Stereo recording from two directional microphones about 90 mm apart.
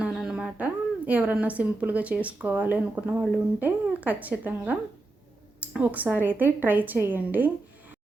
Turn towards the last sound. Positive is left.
turn(degrees=-20)  # may be behind; listen again after turning